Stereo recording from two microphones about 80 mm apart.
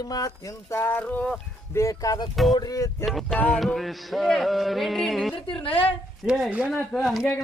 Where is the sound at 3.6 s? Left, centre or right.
Centre.